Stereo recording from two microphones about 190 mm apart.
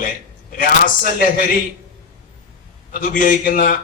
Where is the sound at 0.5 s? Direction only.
50° left (ahead or behind).